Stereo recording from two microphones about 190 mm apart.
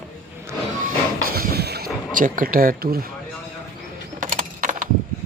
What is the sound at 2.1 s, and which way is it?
Speech, 45° right (ahead or behind).